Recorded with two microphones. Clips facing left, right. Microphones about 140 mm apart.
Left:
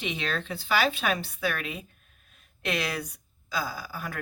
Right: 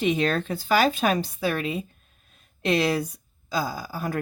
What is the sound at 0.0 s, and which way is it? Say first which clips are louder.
Speech: right 9 dB; 45° right (ahead or behind).